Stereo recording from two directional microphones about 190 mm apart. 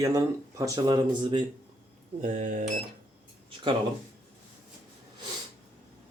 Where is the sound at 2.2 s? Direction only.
40° right (ahead or behind).